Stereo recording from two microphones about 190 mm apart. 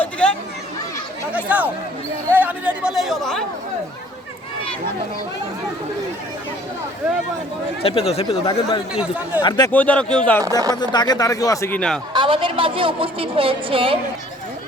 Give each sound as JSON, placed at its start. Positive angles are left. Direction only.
{"t": 0.0, "sound": "chatter", "side_deg": 5}
{"t": 1.3, "sound": "speech", "side_deg": -10}
{"t": 7.8, "sound": "speech", "side_deg": 30}
{"t": 8.9, "sound": "speech", "side_deg": -5}
{"t": 9.4, "sound": "speech", "side_deg": 20}
{"t": 9.7, "sound": "speech", "side_deg": 5}
{"t": 10.8, "sound": "speech", "side_deg": 20}
{"t": 12.1, "sound": "a woman's voice", "side_deg": -25}